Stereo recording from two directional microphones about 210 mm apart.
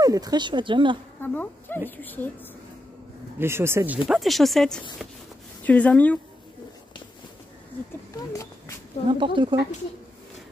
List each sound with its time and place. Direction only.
0.0 s speech: 15° right (ahead or behind)
1.2 s speech: 10° left (ahead or behind)
3.3 s speech: 10° right (ahead or behind); by 6.1 s 5° left (ahead or behind)
8.1 s a sound: 15° left (ahead or behind)
9.2 s speech: 25° right (ahead or behind)